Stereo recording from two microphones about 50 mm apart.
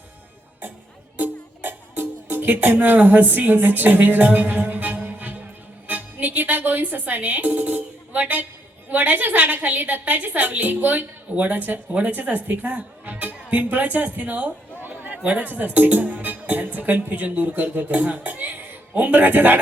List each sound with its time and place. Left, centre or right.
1.2 s music: right
2.6 s a woman's voice: right
14.8 s chatter: right
15.2 s a woman's voice: right